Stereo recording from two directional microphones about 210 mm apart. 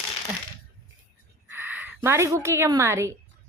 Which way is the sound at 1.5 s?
10° right (ahead or behind).